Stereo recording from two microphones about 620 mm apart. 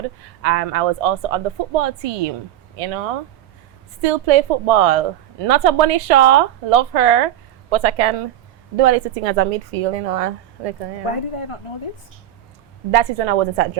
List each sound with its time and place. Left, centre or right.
0.4 s a woman's voice: right
4.0 s a woman's voice: right
11.0 s speech: left
12.9 s a woman's voice: right